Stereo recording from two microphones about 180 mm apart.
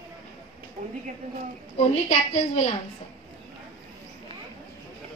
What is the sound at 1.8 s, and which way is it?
Speech, 35° left (ahead or behind).